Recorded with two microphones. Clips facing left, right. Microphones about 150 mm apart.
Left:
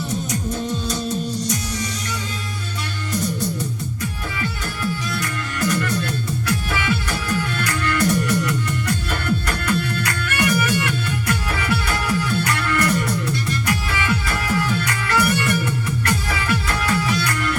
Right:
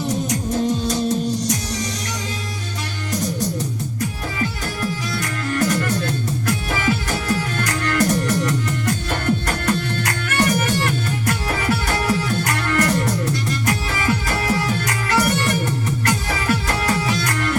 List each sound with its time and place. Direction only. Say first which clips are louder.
0.9 s music: right 4 dB; 45° right (ahead or behind)
4.4 s music: right 3 dB; 45° right (ahead or behind)